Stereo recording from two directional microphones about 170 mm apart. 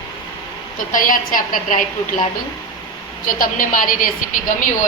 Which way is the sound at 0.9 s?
55° left (ahead or behind).